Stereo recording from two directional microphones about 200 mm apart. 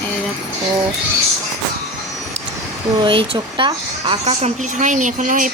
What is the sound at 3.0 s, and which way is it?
Speech, 25° right (ahead or behind).